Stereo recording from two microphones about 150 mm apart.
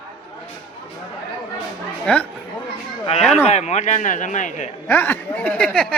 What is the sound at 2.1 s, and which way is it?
Speech, 5° left (ahead or behind).